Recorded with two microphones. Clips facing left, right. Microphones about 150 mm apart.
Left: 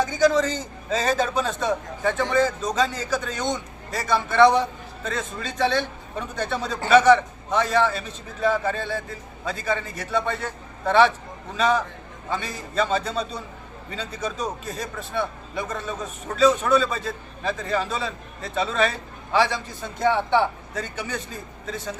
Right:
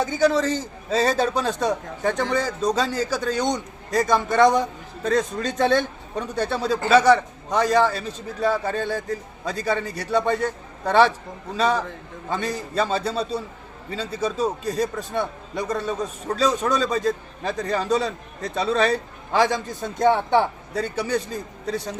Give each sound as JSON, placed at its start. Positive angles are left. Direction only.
{"t": 0.9, "sound": "a man's voice", "side_deg": -35}
{"t": 6.3, "sound": "a man's voice", "side_deg": -35}